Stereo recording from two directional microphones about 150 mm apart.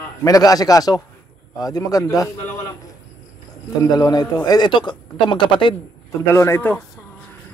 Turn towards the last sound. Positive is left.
turn(degrees=15)  # may be behind; listen again after turning